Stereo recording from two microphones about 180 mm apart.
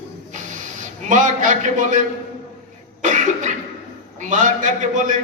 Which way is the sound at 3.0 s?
45° right (ahead or behind).